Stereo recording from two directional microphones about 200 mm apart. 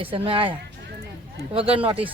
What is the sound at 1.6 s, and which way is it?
Speech, 30° right (ahead or behind).